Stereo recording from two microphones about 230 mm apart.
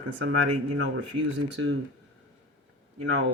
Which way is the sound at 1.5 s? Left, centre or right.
Right.